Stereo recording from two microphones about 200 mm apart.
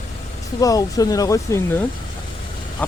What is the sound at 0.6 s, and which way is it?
Speech, 15° left (ahead or behind).